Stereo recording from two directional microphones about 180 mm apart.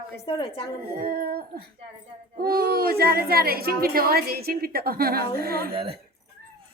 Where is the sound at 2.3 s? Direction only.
55° right (ahead or behind).